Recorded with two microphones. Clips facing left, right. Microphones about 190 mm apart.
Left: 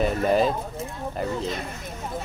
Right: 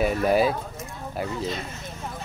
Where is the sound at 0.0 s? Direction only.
5° right (ahead or behind).